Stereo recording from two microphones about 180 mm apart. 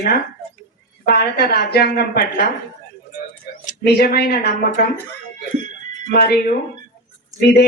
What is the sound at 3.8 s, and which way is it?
Speech, 60° left (ahead or behind).